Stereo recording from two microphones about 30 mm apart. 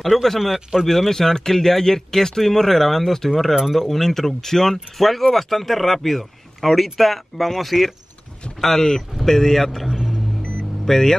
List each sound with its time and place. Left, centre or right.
0.0 s speech: centre
4.9 s speech: centre
8.5 s speech: centre
10.9 s speech: centre